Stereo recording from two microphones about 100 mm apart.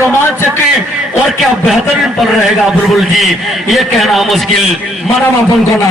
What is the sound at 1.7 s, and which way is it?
A man's voice, centre (ahead or behind).